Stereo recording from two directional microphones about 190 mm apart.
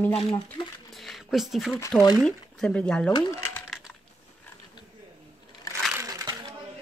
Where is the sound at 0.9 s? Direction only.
Centre (ahead or behind).